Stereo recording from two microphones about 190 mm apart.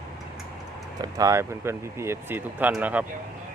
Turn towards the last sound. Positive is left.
turn(degrees=-5)  # may be behind; listen again after turning